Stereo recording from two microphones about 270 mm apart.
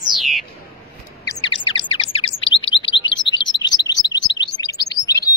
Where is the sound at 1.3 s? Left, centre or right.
Centre.